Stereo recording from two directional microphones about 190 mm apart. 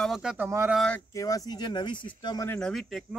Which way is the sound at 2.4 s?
5° left (ahead or behind).